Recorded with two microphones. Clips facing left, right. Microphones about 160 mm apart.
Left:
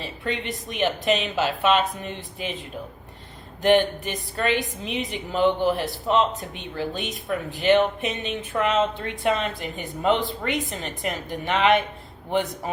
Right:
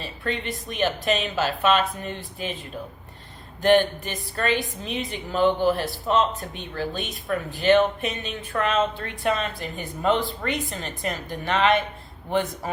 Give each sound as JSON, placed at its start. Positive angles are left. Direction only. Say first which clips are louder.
{"t": 0.0, "sound": "speech", "louder": "even", "side_deg": 20}
{"t": 3.6, "sound": "speech", "louder": "even", "side_deg": 20}